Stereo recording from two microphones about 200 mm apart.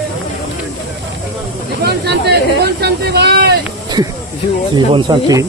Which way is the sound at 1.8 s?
55° right (ahead or behind).